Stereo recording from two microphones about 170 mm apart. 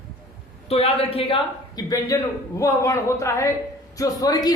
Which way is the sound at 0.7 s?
35° left (ahead or behind).